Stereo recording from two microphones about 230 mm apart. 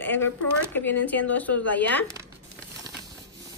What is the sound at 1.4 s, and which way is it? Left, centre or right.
Speech, centre.